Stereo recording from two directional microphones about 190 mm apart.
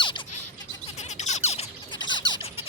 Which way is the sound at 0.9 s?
35° left (ahead or behind).